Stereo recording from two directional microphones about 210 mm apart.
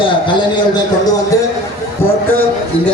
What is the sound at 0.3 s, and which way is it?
Speech, 20° left (ahead or behind).